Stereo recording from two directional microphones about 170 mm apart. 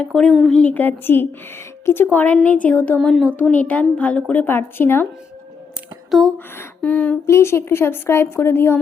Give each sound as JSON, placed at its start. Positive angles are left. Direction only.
{"t": 0.0, "sound": "a woman's voice", "side_deg": 5}
{"t": 6.1, "sound": "a woman's voice", "side_deg": 0}